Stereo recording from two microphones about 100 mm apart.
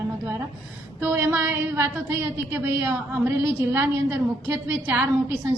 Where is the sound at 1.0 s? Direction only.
20° right (ahead or behind).